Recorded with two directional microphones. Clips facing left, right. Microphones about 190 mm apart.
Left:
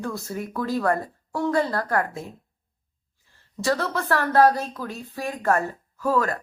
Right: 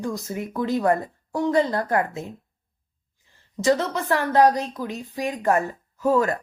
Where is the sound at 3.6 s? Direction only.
20° right (ahead or behind).